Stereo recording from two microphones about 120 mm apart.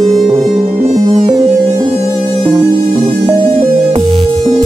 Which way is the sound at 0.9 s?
35° right (ahead or behind).